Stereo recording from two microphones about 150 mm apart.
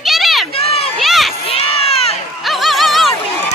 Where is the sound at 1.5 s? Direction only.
40° left (ahead or behind).